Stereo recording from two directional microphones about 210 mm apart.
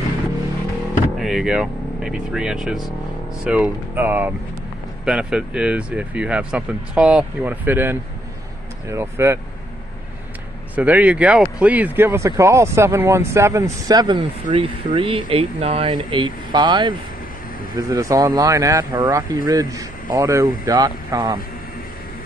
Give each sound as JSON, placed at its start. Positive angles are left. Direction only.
{"t": 1.1, "sound": "speech", "side_deg": 0}
{"t": 10.8, "sound": "speech", "side_deg": -5}